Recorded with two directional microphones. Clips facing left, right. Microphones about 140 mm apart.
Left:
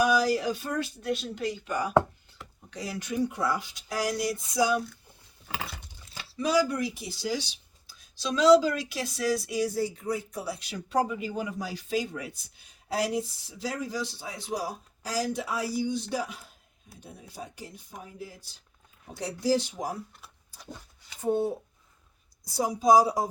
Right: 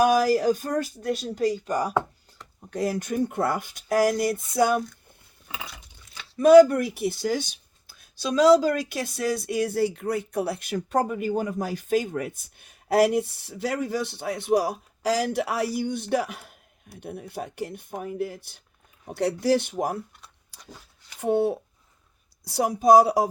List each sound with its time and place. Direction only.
0.0 s speech: 50° right (ahead or behind)
6.3 s speech: 55° right (ahead or behind)
20.5 s a sound: 80° right
21.2 s speech: 70° right (ahead or behind)